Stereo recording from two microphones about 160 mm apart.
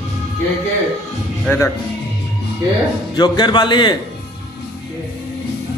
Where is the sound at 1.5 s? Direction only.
15° left (ahead or behind).